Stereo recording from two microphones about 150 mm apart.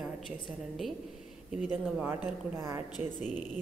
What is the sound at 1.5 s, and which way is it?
A woman's voice, 5° right (ahead or behind).